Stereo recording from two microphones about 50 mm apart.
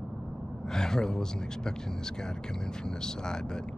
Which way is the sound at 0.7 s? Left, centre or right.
Centre.